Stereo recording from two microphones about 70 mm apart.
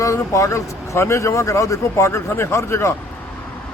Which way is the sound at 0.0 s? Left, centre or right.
Left.